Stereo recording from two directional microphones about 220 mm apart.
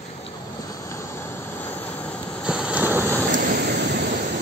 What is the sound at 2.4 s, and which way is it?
Vehicle, 5° right (ahead or behind).